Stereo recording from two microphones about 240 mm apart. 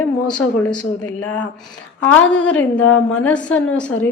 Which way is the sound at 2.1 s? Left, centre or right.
Centre.